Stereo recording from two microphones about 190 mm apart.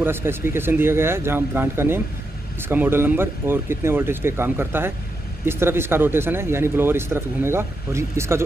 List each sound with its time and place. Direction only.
0.0 s speech: 10° right (ahead or behind)